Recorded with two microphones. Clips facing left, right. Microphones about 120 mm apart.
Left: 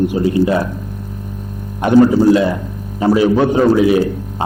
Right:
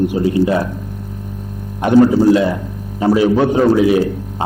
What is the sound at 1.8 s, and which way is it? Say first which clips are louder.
A man's voice: even; 20° left (ahead or behind).